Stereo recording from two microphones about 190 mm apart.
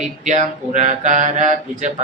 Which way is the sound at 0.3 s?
40° right (ahead or behind).